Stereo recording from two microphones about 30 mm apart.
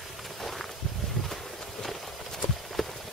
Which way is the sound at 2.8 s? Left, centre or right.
Centre.